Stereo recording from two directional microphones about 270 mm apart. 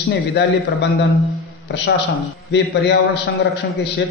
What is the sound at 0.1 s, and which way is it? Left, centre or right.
Speech, left.